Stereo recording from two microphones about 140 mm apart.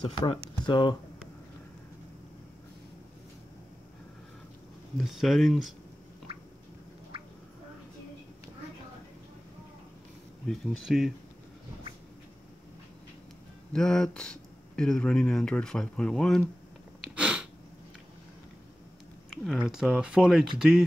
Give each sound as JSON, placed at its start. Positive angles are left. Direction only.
{"t": 0.6, "sound": "speech", "side_deg": 35}
{"t": 4.9, "sound": "speech", "side_deg": 0}
{"t": 10.4, "sound": "speech", "side_deg": 5}
{"t": 13.7, "sound": "speech", "side_deg": 5}
{"t": 17.0, "sound": "sneeze", "side_deg": -5}
{"t": 19.3, "sound": "a sound", "side_deg": 0}
{"t": 19.7, "sound": "speech", "side_deg": -5}